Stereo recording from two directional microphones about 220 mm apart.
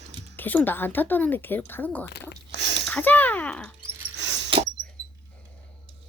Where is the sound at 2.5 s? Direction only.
50° right (ahead or behind).